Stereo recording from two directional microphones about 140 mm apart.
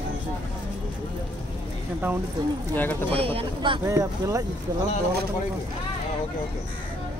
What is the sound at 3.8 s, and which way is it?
Speech, 20° right (ahead or behind).